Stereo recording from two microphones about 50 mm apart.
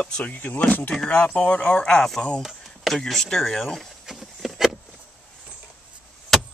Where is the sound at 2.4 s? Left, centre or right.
Centre.